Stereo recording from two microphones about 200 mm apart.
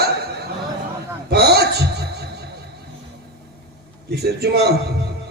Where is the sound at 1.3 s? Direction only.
55° right (ahead or behind).